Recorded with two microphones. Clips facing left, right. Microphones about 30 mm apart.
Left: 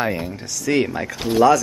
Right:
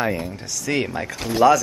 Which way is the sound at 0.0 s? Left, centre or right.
Centre.